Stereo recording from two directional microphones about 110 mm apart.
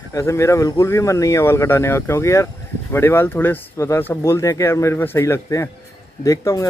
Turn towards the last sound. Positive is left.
turn(degrees=30)  # may be behind; listen again after turning